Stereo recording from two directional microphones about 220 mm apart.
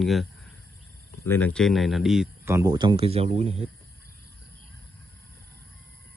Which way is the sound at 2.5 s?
15° right (ahead or behind).